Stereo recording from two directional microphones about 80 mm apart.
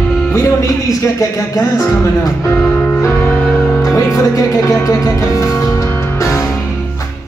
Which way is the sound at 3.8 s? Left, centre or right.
Left.